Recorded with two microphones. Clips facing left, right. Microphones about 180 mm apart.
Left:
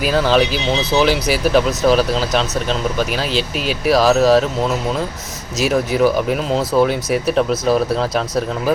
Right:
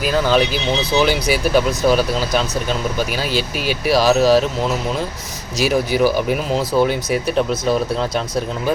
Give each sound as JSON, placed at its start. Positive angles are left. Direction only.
{"t": 0.3, "sound": "speech", "side_deg": 0}
{"t": 5.5, "sound": "speech", "side_deg": 0}